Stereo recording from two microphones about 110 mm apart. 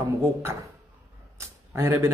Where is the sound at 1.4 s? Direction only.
25° right (ahead or behind).